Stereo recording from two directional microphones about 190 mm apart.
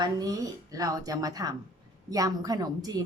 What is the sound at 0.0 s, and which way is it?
A woman's voice, 20° right (ahead or behind).